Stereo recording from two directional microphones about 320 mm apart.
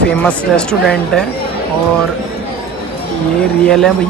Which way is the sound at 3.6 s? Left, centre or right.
Centre.